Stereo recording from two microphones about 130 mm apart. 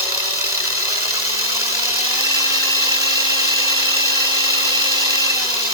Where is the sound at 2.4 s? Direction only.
25° right (ahead or behind).